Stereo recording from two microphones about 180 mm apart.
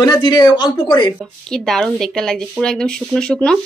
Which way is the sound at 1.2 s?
Centre (ahead or behind).